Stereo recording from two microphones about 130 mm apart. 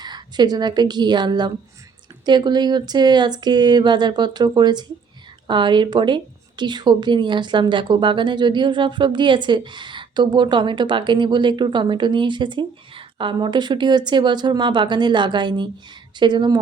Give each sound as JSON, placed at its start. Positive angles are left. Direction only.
{"t": 0.0, "sound": "a woman's voice", "side_deg": -35}